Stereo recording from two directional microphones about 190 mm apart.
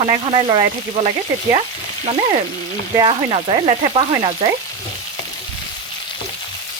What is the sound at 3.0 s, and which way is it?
Speech, 30° right (ahead or behind).